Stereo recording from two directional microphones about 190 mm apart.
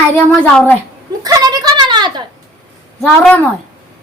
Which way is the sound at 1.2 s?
20° right (ahead or behind).